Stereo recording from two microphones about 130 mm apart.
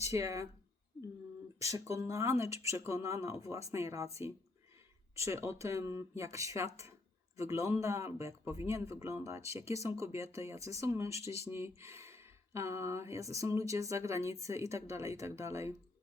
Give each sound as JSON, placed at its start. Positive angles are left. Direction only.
{"t": 0.1, "sound": "speech", "side_deg": -25}
{"t": 1.6, "sound": "speech", "side_deg": -25}
{"t": 5.1, "sound": "speech", "side_deg": -20}